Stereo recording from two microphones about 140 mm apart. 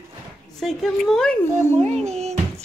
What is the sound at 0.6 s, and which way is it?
Speech, centre (ahead or behind).